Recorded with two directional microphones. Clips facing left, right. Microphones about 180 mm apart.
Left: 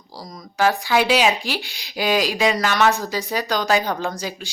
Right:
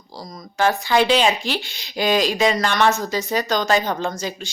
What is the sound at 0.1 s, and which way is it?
Speech, 10° left (ahead or behind).